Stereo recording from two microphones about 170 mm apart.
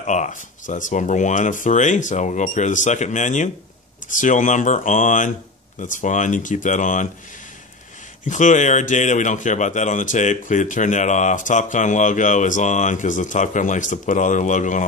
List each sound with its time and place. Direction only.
0.0 s speech: 45° left (ahead or behind)
8.3 s speech: 45° left (ahead or behind)